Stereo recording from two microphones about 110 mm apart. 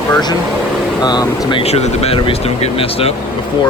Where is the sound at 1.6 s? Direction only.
70° left (ahead or behind).